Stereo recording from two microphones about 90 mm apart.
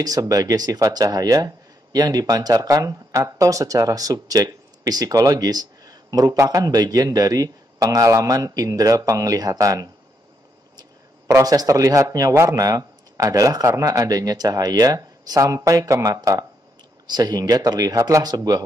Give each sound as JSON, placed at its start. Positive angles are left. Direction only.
{"t": 0.0, "sound": "speech", "side_deg": -40}